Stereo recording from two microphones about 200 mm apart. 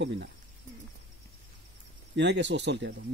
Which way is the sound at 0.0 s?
60° right (ahead or behind).